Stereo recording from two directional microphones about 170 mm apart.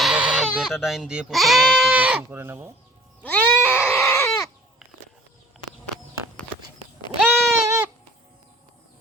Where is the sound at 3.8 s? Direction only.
10° left (ahead or behind).